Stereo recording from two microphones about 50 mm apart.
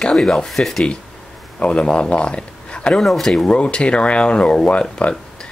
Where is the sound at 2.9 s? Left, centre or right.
Centre.